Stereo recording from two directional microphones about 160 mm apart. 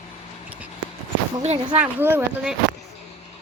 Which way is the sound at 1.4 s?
40° right (ahead or behind).